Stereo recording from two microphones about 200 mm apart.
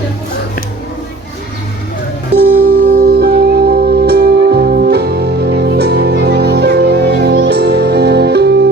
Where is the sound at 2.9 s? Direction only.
50° right (ahead or behind).